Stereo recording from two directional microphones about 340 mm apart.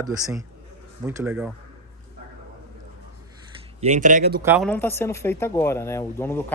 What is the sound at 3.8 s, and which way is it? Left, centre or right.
Speech, right.